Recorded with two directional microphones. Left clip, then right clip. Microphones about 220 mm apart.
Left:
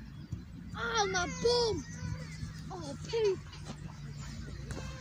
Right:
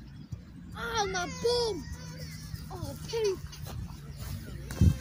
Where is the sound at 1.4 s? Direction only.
5° right (ahead or behind).